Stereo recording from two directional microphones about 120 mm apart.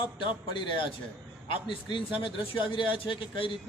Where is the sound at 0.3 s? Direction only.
45° left (ahead or behind).